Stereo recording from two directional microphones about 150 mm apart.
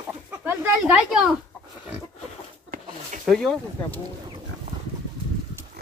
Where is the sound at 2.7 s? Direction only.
70° right (ahead or behind).